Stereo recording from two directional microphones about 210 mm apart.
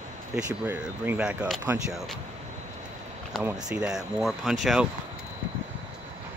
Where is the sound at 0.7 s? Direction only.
10° right (ahead or behind).